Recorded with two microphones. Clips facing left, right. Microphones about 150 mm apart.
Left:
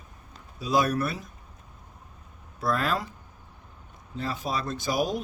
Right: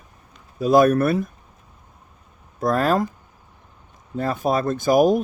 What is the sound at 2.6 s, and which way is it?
Speech, 45° right (ahead or behind).